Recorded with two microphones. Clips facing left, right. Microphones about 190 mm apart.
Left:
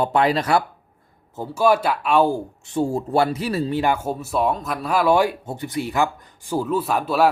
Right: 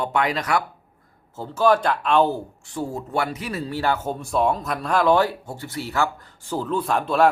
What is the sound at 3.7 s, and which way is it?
Speech, 15° left (ahead or behind).